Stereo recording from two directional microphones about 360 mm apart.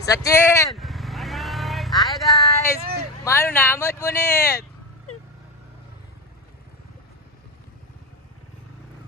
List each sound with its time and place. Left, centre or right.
0.0 s vehicle: centre
3.2 s speech: centre